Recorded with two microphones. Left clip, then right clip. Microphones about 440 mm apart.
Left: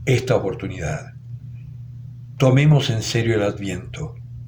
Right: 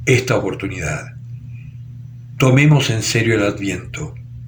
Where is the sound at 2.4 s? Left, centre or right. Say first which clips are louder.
Right 3 dB; left.